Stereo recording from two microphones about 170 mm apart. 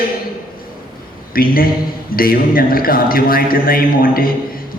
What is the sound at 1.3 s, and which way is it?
A man's voice, 60° left (ahead or behind).